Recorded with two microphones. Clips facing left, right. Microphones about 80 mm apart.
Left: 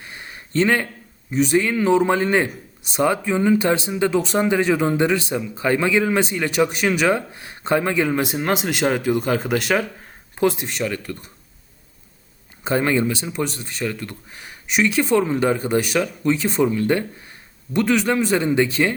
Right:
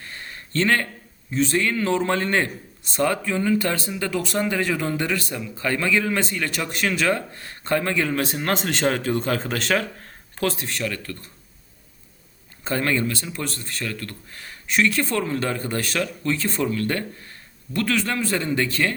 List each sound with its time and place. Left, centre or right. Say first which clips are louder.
0.0 s a sound: even; centre
1.3 s speech: left 3 dB; centre
12.6 s speech: left 4 dB; centre